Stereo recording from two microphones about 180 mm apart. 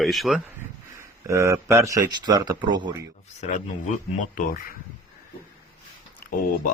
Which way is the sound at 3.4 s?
40° left (ahead or behind).